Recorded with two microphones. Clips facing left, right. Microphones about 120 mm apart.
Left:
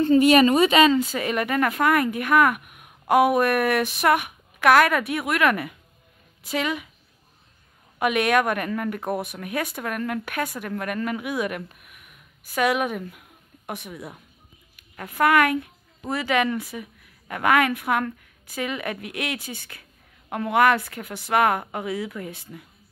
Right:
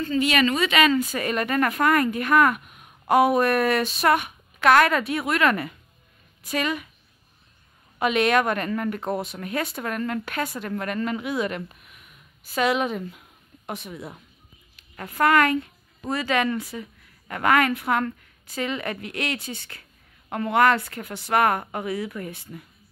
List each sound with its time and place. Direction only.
0.2 s a woman's voice: 45° left (ahead or behind)
0.6 s speech: 35° left (ahead or behind)
0.9 s speech: 15° left (ahead or behind)
8.0 s speech: 5° left (ahead or behind)
11.8 s a sound: 5° left (ahead or behind)
14.8 s speech: 5° left (ahead or behind)